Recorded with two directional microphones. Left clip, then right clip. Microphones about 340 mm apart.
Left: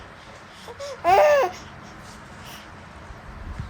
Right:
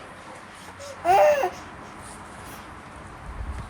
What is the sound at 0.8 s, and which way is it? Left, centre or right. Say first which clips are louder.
Baby cry: left 1 dB; centre.